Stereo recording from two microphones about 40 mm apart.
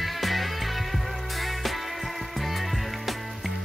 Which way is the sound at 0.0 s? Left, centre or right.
Centre.